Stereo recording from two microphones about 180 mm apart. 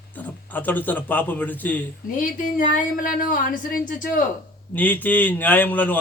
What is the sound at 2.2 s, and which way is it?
Speech, 45° left (ahead or behind).